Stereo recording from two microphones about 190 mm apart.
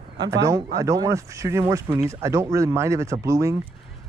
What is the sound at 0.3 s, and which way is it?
Speech, 15° right (ahead or behind).